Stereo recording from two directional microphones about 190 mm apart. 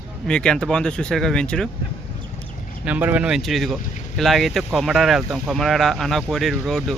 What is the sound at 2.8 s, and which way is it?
Speech, 10° right (ahead or behind).